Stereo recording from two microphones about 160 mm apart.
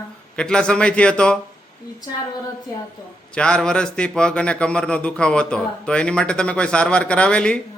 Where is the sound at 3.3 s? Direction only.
5° left (ahead or behind).